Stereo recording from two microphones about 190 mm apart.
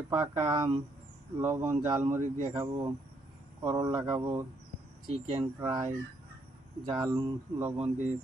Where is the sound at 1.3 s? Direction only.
10° right (ahead or behind).